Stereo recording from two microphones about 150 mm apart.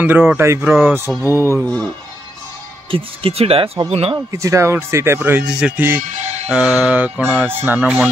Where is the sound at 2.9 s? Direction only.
35° right (ahead or behind).